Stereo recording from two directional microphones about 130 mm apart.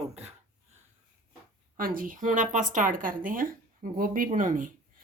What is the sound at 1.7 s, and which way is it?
Speech, 90° right.